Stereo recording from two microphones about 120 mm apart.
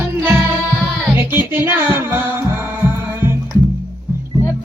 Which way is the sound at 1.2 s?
20° right (ahead or behind).